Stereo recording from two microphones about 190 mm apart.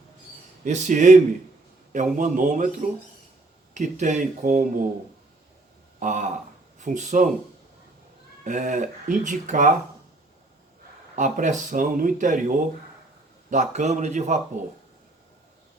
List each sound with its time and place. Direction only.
0.6 s speech: 40° right (ahead or behind)
3.8 s speech: 40° right (ahead or behind)
6.0 s speech: 40° right (ahead or behind)
8.4 s speech: 40° right (ahead or behind)
11.1 s speech: 40° right (ahead or behind)